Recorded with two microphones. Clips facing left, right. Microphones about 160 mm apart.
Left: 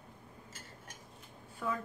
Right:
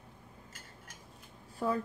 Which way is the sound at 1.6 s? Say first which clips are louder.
Right 5 dB; 35° right (ahead or behind).